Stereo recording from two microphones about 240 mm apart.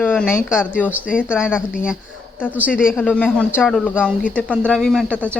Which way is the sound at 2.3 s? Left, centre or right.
Centre.